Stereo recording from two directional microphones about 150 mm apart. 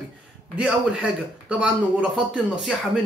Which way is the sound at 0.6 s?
5° right (ahead or behind).